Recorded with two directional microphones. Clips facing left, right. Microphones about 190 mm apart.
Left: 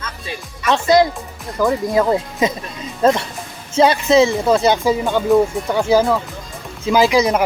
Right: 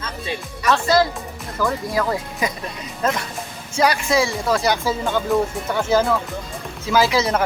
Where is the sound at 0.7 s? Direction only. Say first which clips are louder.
Left 4 dB; 20° left (ahead or behind).